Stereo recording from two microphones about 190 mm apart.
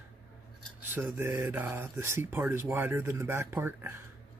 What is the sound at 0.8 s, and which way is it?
Speech, 10° right (ahead or behind).